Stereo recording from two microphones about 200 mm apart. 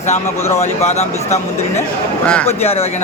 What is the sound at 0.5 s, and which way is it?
Speech, 35° left (ahead or behind).